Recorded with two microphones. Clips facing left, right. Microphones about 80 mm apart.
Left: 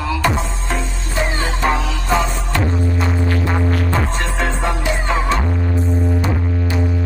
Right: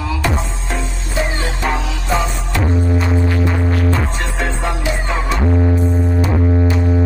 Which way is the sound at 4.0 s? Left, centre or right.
Centre.